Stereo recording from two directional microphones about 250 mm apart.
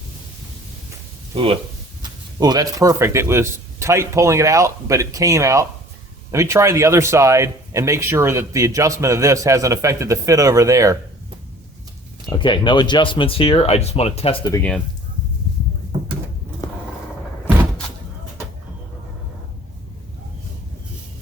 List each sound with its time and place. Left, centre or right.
2.0 s a man's voice: centre
12.4 s speech: centre